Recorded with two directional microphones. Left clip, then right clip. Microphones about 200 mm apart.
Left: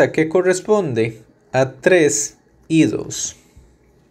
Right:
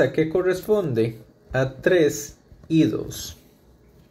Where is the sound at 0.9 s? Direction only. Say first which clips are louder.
Left 3 dB; 20° left (ahead or behind).